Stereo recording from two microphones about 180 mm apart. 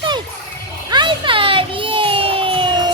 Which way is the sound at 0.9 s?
25° right (ahead or behind).